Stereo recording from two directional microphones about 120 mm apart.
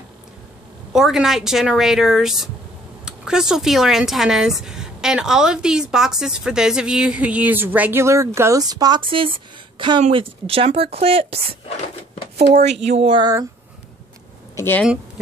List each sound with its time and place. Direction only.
0.9 s speech: 5° right (ahead or behind); by 11.4 s 55° right (ahead or behind)
12.9 s speech: 55° right (ahead or behind)
13.2 s speech: 30° right (ahead or behind)
14.5 s a sound: 20° left (ahead or behind)